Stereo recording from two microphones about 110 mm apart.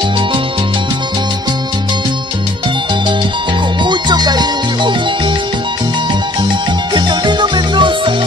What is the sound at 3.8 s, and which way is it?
Music, 45° right (ahead or behind).